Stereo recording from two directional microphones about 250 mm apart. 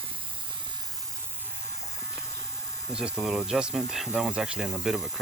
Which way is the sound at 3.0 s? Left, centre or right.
Centre.